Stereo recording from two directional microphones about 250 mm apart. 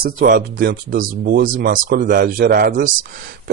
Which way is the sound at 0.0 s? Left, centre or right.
Right.